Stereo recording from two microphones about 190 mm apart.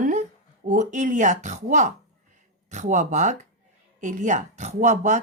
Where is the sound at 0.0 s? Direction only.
40° right (ahead or behind).